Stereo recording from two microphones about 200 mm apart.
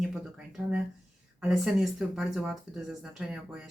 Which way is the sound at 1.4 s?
Centre (ahead or behind).